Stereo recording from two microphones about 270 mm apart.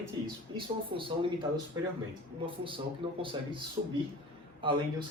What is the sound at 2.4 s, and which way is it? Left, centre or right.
Speech, centre.